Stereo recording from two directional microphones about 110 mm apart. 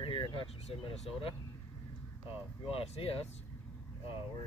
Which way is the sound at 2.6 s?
60° left (ahead or behind).